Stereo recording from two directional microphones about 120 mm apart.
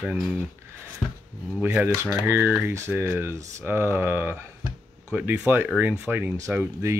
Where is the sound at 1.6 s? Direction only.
10° right (ahead or behind).